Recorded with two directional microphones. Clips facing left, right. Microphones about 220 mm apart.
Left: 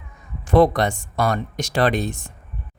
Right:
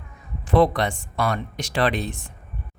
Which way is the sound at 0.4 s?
45° left (ahead or behind).